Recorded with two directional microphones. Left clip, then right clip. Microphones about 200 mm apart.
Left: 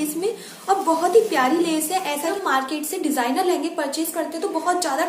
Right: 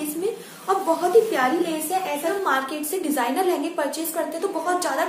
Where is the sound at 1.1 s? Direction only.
10° left (ahead or behind).